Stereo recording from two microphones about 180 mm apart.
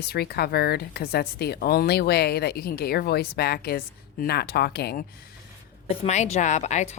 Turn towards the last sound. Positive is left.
turn(degrees=40)  # may be behind; listen again after turning